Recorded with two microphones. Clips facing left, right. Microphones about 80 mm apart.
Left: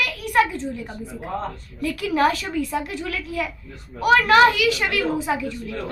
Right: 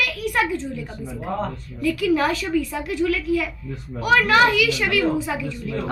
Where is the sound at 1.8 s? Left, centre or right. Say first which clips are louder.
Right 1 dB; left.